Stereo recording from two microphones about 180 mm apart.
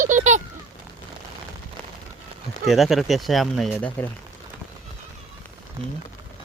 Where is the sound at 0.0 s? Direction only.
45° right (ahead or behind).